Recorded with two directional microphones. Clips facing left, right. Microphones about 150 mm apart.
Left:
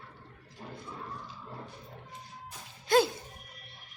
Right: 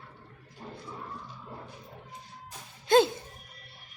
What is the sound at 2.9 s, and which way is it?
Music, 25° right (ahead or behind).